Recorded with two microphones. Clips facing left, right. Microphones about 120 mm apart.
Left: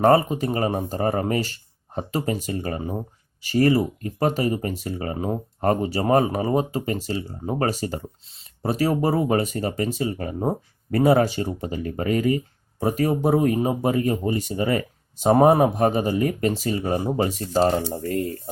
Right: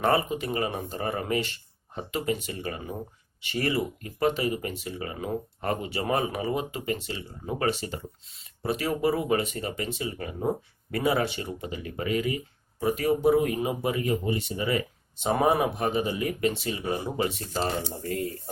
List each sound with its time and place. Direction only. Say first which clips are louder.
0.0 s speech: left 7 dB; 40° left (ahead or behind)